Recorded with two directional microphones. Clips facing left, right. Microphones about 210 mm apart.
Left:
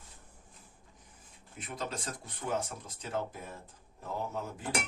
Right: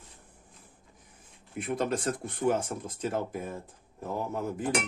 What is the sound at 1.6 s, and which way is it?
Speech, 55° right (ahead or behind).